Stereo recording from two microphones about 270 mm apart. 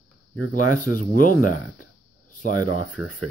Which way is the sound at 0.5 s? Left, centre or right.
Left.